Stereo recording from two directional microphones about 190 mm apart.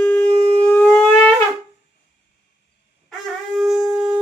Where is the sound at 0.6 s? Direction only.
10° left (ahead or behind).